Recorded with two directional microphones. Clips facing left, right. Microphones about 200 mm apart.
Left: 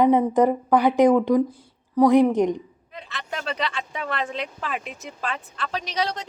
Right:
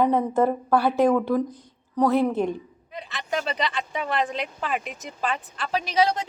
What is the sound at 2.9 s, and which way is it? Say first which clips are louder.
Speech: right 5 dB; centre (ahead or behind).